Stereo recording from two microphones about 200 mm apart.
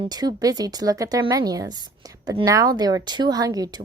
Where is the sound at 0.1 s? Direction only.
20° right (ahead or behind).